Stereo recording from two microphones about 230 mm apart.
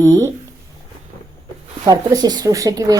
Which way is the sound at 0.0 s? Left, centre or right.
Centre.